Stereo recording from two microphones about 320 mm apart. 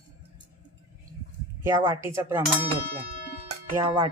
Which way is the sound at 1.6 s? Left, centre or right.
Centre.